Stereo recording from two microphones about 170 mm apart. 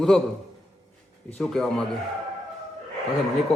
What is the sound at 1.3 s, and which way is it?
Speech, centre (ahead or behind).